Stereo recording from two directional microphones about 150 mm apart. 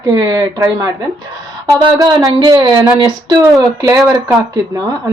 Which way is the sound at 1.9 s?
25° right (ahead or behind).